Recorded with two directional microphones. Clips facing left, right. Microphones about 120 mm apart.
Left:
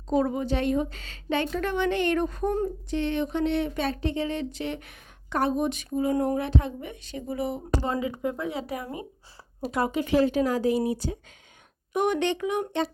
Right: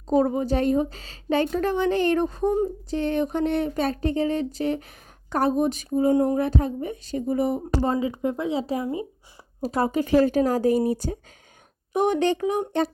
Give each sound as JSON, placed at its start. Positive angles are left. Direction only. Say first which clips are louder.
{"t": 0.1, "sound": "speech", "louder": "right 4 dB", "side_deg": -35}
{"t": 2.9, "sound": "speech", "louder": "right 2 dB", "side_deg": -45}
{"t": 8.2, "sound": "speech", "louder": "right 4 dB", "side_deg": -25}
{"t": 9.6, "sound": "speech", "louder": "right 3 dB", "side_deg": -40}
{"t": 11.9, "sound": "speech", "louder": "right 3 dB", "side_deg": -35}